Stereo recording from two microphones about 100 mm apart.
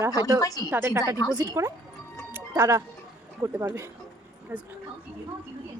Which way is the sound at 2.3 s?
25° right (ahead or behind).